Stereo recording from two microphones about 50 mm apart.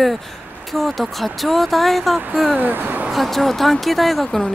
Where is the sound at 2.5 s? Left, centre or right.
Right.